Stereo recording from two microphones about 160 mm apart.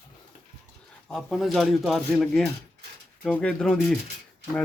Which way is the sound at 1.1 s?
Centre (ahead or behind).